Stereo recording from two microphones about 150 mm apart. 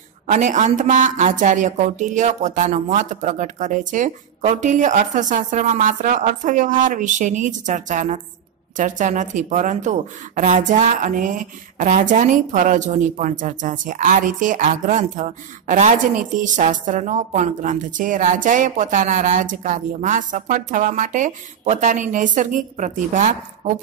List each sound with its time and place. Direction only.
0.3 s speech: 55° right (ahead or behind)